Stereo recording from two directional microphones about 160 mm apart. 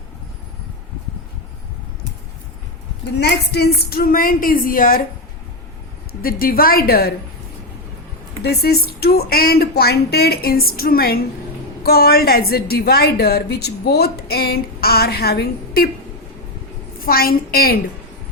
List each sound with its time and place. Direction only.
3.2 s a woman's voice: 90° left; by 5.0 s 60° left (ahead or behind)
6.2 s a woman's voice: 65° left (ahead or behind)
8.4 s a woman's voice: 80° left
17.0 s a woman's voice: 65° left (ahead or behind)